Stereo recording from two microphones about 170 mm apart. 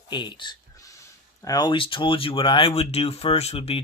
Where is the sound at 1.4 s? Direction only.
20° left (ahead or behind).